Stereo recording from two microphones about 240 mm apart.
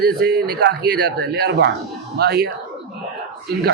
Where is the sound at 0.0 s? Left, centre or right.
Right.